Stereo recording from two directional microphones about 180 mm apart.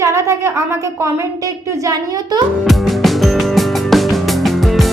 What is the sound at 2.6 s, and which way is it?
Music, centre (ahead or behind).